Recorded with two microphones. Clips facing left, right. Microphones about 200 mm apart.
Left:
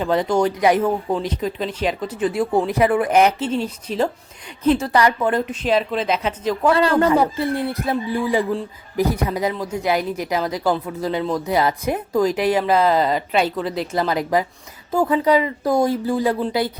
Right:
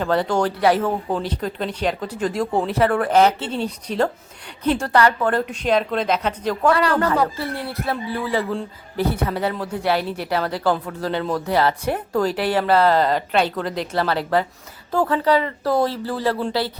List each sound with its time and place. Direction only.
0.0 s a woman's voice: 10° left (ahead or behind)
3.6 s a woman's voice: 5° left (ahead or behind)
7.0 s speech: 20° left (ahead or behind)